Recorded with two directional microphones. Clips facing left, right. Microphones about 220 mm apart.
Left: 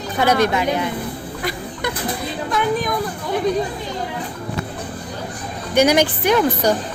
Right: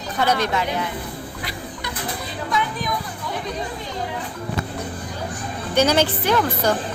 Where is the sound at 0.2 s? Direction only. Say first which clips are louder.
Left 4 dB; 10° left (ahead or behind).